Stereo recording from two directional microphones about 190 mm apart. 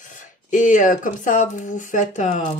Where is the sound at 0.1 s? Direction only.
45° left (ahead or behind).